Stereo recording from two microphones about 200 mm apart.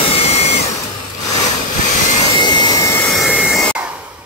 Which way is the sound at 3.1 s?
5° right (ahead or behind).